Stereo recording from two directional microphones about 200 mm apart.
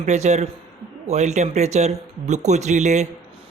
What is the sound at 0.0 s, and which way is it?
Speech, 35° right (ahead or behind).